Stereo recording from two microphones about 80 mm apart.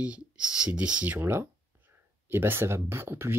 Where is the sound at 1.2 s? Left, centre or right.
Right.